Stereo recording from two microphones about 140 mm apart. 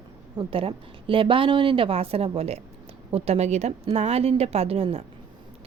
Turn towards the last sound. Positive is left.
turn(degrees=-45)  # may be behind; listen again after turning